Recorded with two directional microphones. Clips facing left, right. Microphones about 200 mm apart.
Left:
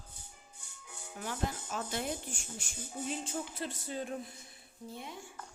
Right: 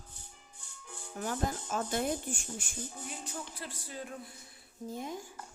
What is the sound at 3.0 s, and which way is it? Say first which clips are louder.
Speech: left 5 dB; 25° left (ahead or behind).